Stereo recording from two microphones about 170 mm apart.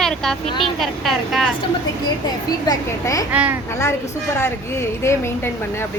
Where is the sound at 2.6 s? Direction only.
20° left (ahead or behind).